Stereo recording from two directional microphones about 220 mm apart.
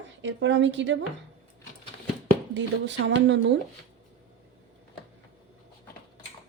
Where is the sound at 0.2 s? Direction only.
55° right (ahead or behind).